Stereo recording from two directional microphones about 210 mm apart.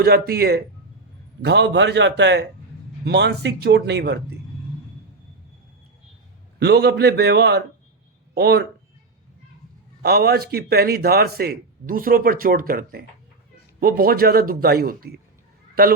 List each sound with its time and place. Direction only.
0.0 s a man's voice: 45° right (ahead or behind)
6.6 s a man's voice: 50° right (ahead or behind)
10.0 s a man's voice: 50° right (ahead or behind)